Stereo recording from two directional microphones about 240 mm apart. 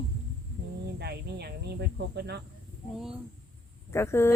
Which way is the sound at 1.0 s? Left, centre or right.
Right.